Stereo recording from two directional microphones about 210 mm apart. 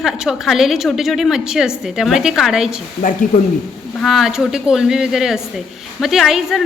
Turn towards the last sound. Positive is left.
turn(degrees=0)  # may be behind; listen again after turning